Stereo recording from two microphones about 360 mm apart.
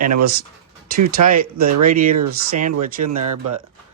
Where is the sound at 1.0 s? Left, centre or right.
Right.